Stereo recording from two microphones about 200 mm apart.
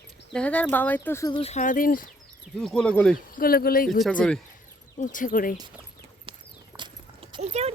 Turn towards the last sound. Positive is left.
turn(degrees=-30)  # may be behind; listen again after turning